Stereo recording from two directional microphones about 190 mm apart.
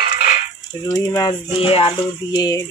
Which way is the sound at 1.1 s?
20° left (ahead or behind).